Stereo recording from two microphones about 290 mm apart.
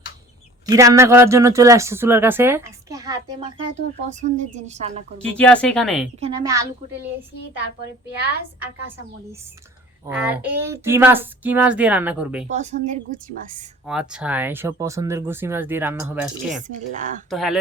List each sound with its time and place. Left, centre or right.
0.6 s speech: centre
4.1 s a woman's voice: right
5.2 s speech: centre
6.1 s speech: centre
10.1 s speech: centre
12.5 s a woman's voice: right
13.8 s speech: centre
16.6 s a woman's voice: right
17.2 s speech: centre